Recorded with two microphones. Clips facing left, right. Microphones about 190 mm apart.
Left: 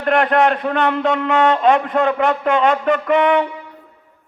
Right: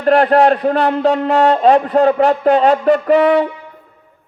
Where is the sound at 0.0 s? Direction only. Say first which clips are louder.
Right 4 dB; 35° right (ahead or behind).